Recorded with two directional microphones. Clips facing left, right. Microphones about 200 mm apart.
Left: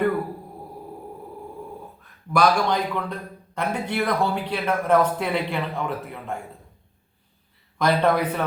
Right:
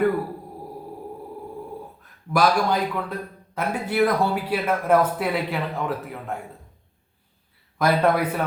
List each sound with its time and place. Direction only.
2.3 s a man's voice: 5° right (ahead or behind)
7.8 s a man's voice: 5° right (ahead or behind)